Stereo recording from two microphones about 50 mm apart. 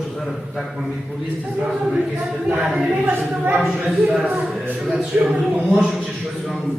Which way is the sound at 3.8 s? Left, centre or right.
Centre.